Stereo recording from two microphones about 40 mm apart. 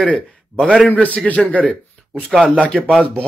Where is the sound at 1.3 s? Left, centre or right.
Left.